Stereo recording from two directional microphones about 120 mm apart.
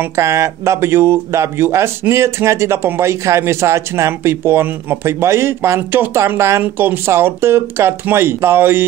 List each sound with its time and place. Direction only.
0.1 s speech: 25° right (ahead or behind)